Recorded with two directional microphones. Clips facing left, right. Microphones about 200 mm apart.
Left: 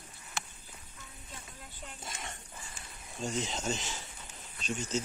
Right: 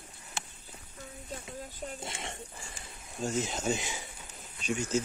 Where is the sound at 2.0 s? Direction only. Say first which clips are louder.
Right 4 dB; 25° right (ahead or behind).